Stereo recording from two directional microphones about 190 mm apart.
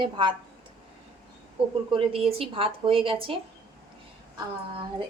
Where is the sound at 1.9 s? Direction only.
30° right (ahead or behind).